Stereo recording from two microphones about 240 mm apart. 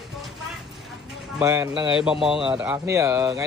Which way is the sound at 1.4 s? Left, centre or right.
Centre.